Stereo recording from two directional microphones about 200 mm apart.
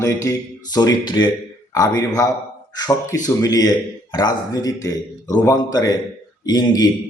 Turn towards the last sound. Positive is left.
turn(degrees=20)  # may be behind; listen again after turning